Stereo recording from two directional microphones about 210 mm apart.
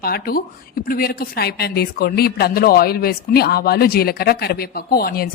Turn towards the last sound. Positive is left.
turn(degrees=45)  # may be behind; listen again after turning